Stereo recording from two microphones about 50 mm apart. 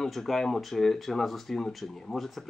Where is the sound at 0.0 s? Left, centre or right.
Centre.